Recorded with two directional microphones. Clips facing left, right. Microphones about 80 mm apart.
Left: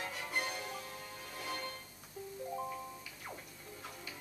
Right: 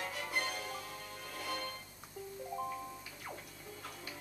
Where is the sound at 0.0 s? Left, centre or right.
Centre.